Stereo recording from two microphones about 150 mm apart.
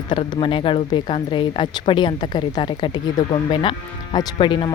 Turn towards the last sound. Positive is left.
turn(degrees=30)  # may be behind; listen again after turning